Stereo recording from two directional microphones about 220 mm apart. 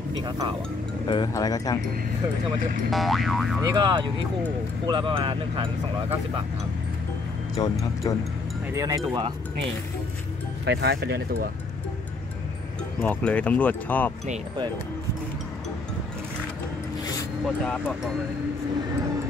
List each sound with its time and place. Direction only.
0.2 s speech: 20° right (ahead or behind)
1.0 s speech: 20° left (ahead or behind)
2.9 s boing: centre (ahead or behind)
3.6 s speech: 20° right (ahead or behind)
7.5 s speech: 15° left (ahead or behind)
8.7 s speech: 15° right (ahead or behind)
10.6 s speech: 50° right (ahead or behind)
13.0 s speech: 5° left (ahead or behind)
17.5 s boing: 5° left (ahead or behind)